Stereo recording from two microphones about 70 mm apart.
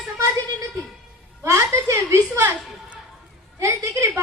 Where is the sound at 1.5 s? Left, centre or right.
Right.